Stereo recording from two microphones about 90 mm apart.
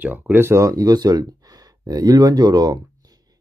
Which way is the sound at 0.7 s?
45° right (ahead or behind).